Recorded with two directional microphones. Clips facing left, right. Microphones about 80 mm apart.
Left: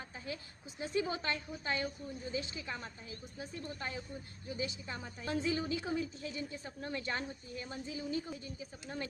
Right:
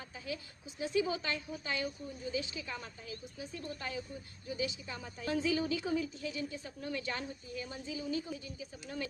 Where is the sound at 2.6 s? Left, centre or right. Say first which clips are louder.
Even; left.